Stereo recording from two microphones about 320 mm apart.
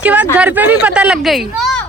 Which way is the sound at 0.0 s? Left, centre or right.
Centre.